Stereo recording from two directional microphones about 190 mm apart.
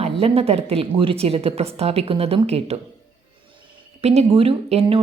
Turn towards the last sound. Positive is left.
turn(degrees=-30)  # may be behind; listen again after turning